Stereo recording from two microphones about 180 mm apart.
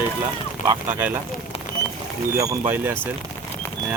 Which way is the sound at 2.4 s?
15° right (ahead or behind).